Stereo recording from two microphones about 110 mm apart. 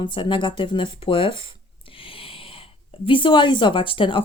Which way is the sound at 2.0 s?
55° left (ahead or behind).